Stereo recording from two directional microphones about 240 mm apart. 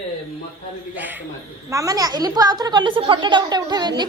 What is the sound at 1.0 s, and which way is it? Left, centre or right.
A woman's voice, centre.